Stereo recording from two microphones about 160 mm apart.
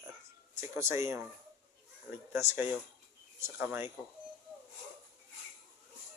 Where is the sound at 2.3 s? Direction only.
15° right (ahead or behind).